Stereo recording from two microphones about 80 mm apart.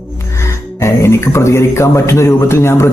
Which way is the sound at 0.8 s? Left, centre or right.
Left.